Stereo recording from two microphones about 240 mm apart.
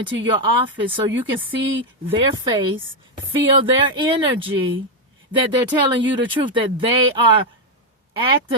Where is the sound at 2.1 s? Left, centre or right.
Right.